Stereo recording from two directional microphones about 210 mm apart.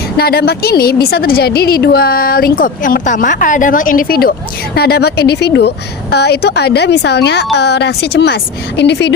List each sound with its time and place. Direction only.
0.2 s a woman's voice: 50° left (ahead or behind)